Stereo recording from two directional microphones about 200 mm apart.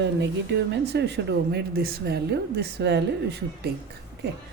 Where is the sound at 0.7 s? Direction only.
60° right (ahead or behind).